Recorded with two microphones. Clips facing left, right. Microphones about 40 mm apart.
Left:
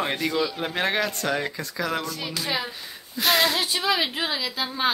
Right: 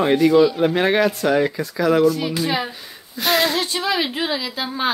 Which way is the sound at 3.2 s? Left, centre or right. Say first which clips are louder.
Right 3 dB; centre.